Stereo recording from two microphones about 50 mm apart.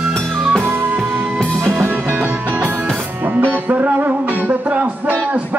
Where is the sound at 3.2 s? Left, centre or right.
Right.